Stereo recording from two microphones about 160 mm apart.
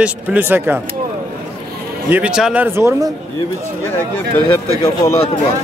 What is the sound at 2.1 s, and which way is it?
A man's voice, 10° right (ahead or behind).